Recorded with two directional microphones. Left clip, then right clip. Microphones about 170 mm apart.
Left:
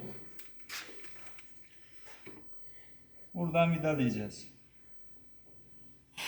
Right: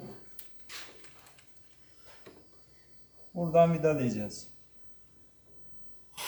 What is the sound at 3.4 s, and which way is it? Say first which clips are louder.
Speech: right 6 dB; 15° right (ahead or behind).